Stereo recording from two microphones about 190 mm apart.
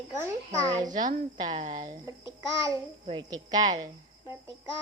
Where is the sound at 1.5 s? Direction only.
40° right (ahead or behind).